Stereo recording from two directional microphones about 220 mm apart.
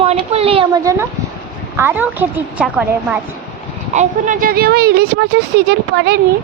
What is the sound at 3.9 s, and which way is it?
Speech, 35° right (ahead or behind).